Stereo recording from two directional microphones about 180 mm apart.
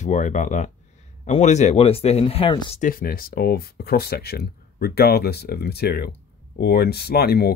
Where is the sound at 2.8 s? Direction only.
55° left (ahead or behind).